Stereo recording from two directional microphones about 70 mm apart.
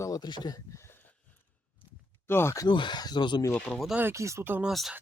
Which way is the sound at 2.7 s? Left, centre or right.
Left.